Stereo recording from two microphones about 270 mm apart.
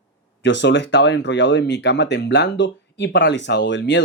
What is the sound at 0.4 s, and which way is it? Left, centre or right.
Speech, left.